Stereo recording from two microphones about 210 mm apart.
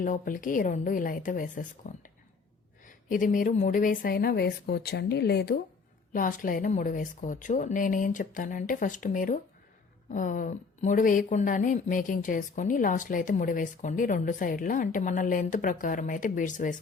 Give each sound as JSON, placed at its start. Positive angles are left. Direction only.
{"t": 0.0, "sound": "a woman's voice", "side_deg": 40}
{"t": 6.1, "sound": "a woman's voice", "side_deg": 40}